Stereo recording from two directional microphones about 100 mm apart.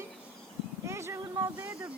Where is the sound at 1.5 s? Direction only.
15° right (ahead or behind).